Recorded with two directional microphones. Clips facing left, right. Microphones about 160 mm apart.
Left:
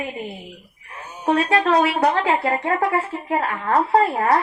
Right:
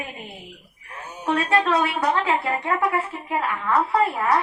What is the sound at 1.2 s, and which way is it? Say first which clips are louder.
A woman's voice: left 3 dB; 40° left (ahead or behind).